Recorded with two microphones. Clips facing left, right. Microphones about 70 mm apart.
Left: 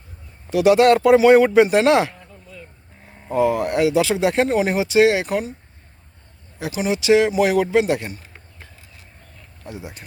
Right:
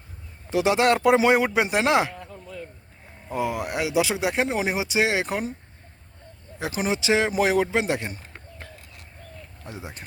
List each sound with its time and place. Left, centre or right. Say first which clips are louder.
0.5 s speech: left 7 dB; right
2.1 s a sound: right 4 dB; right
3.3 s speech: left 8 dB; centre; by 5.5 s right
6.6 s a man's voice: left 3 dB; right
9.6 s a man's voice: left 4 dB; right